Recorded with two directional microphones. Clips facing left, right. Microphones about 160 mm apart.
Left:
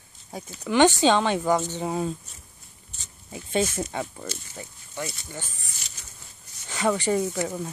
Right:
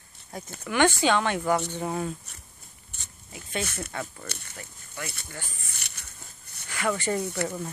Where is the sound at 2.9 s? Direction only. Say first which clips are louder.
Even; 60° right (ahead or behind).